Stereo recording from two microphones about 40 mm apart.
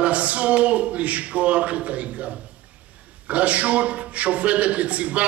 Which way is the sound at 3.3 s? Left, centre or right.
Right.